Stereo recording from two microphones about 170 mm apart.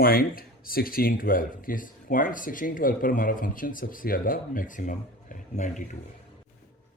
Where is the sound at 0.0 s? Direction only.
60° left (ahead or behind).